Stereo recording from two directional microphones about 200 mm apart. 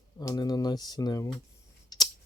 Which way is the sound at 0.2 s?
20° left (ahead or behind).